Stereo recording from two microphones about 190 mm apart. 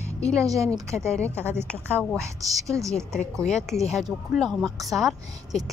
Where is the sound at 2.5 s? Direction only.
15° right (ahead or behind).